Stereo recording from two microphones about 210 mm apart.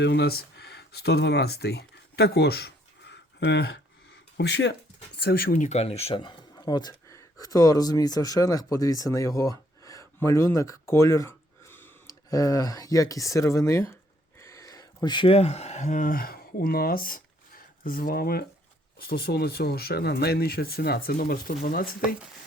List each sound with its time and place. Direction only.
0.0 s speech: 50° left (ahead or behind)